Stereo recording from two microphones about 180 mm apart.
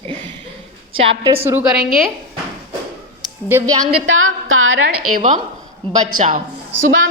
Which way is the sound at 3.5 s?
15° right (ahead or behind).